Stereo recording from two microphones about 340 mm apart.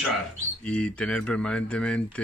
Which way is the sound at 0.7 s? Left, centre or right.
Centre.